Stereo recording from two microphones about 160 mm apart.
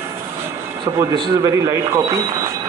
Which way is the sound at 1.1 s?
30° right (ahead or behind).